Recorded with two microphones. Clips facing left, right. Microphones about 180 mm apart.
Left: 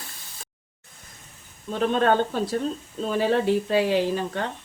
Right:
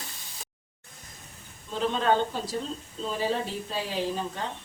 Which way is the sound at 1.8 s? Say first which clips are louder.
Left 4 dB; 60° left (ahead or behind).